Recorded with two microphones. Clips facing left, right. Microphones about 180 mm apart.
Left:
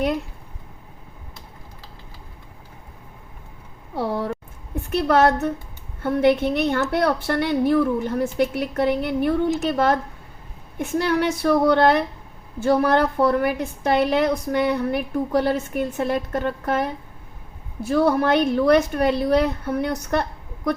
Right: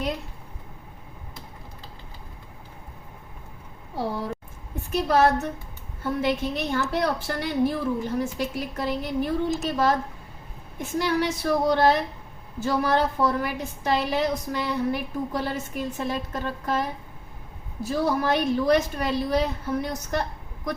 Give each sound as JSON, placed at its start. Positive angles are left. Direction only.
{"t": 4.9, "sound": "a woman's voice", "side_deg": 65}